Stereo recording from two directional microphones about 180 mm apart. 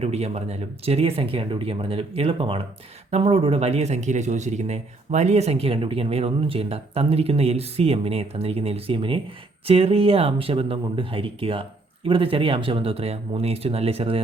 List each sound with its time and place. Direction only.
0.0 s speech: 35° right (ahead or behind)